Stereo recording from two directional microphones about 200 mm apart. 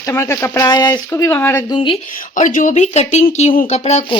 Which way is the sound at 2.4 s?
40° left (ahead or behind).